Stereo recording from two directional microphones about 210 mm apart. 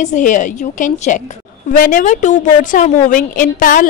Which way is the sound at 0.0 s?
35° left (ahead or behind).